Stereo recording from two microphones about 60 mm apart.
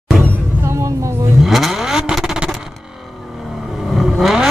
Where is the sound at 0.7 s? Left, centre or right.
Right.